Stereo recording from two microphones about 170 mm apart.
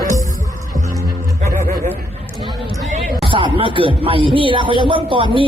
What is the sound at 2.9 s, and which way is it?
Speech, 30° right (ahead or behind).